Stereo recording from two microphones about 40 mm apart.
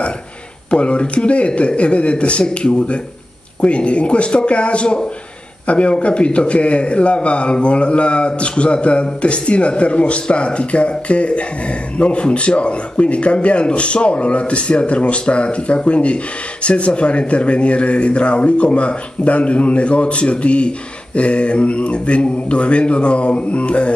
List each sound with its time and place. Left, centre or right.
0.7 s a man's voice: left